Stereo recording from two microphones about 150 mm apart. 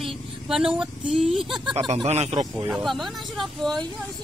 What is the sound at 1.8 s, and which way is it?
Speech, 40° right (ahead or behind).